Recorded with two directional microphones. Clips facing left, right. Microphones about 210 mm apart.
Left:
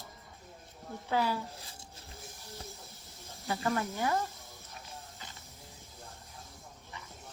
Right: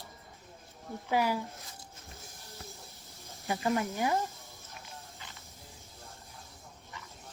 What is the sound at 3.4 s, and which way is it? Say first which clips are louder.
Speech: right 2 dB; 15° right (ahead or behind).